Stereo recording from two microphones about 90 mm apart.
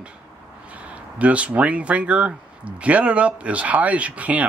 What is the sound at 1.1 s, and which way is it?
Speech, 15° right (ahead or behind).